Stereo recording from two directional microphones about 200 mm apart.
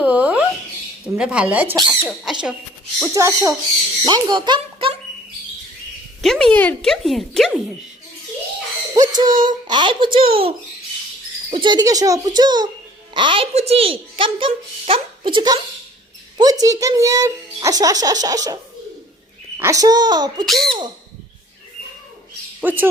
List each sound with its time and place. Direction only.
0.0 s a sound: 5° right (ahead or behind)
1.0 s speech: 5° right (ahead or behind)
3.1 s a child's voice: 15° right (ahead or behind)
6.2 s speech: centre (ahead or behind)
9.0 s a sound: 20° right (ahead or behind)
9.5 s a woman's voice: 20° right (ahead or behind)
11.5 s a woman's voice: 20° right (ahead or behind)
20.4 s speech: centre (ahead or behind)
22.6 s a child's voice: 10° right (ahead or behind)